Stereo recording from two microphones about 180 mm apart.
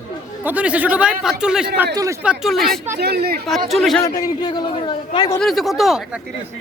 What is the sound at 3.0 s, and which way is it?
Speech, 65° right (ahead or behind).